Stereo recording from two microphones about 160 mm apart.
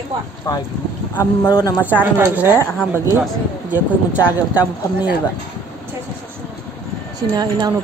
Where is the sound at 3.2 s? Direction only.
10° right (ahead or behind).